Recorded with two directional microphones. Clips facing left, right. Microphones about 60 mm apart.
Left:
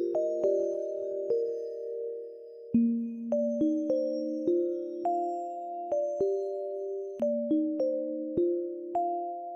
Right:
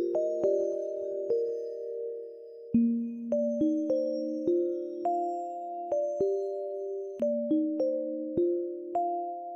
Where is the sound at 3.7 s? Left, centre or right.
Right.